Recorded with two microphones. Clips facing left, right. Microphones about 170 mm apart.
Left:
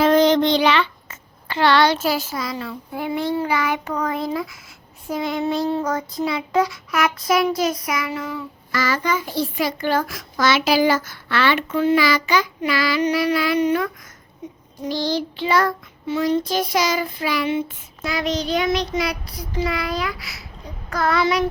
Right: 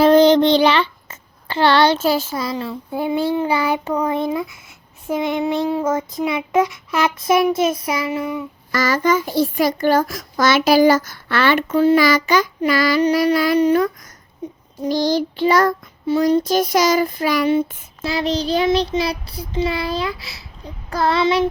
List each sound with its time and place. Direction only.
0.0 s child singing: 30° right (ahead or behind)
8.7 s a child's voice: 45° right (ahead or behind)
14.8 s child singing: 45° right (ahead or behind); by 21.4 s 25° right (ahead or behind)